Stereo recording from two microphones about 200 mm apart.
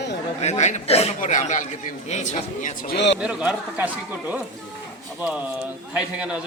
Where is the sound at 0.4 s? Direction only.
35° left (ahead or behind); by 3.2 s 55° left (ahead or behind).